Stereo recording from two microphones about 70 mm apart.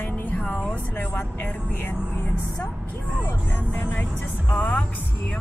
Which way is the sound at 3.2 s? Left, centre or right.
Left.